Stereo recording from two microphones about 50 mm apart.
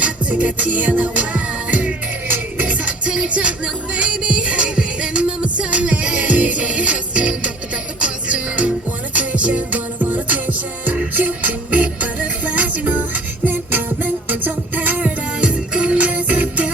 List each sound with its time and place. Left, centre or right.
0.0 s music: right
2.2 s music: right
13.5 s music: right
15.4 s music: right